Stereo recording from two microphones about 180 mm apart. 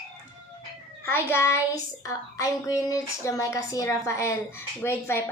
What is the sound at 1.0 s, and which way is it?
Speech, 15° left (ahead or behind).